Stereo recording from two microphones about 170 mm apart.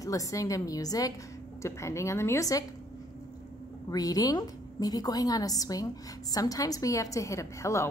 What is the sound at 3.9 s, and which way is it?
A woman's voice, 20° left (ahead or behind).